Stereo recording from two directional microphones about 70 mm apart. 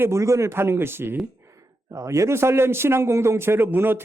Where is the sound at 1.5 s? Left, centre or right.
Right.